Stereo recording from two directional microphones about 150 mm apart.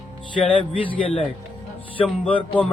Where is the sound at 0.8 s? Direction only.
35° left (ahead or behind).